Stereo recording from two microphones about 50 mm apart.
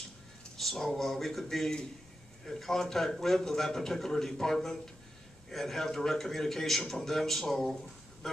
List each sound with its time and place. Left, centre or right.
0.6 s a man's voice: centre